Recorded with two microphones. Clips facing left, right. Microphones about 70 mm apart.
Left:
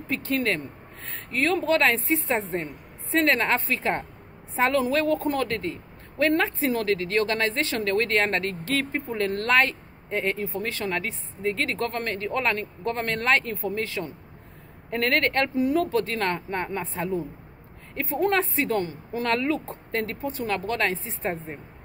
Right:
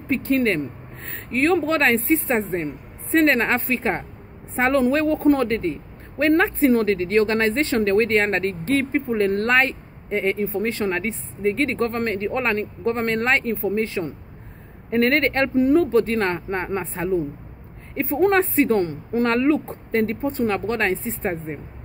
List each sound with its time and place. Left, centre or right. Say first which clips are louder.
0.1 s a woman's voice: right 6 dB; right
15.5 s a woman's voice: right 6 dB; right